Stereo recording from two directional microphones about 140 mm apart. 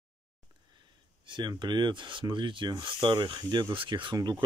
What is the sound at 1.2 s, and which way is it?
Speech, 35° right (ahead or behind).